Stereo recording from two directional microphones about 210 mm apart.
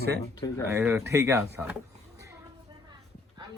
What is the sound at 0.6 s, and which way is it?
Speech, 10° right (ahead or behind).